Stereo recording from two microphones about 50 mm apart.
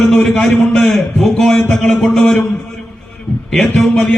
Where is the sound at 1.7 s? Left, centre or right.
Centre.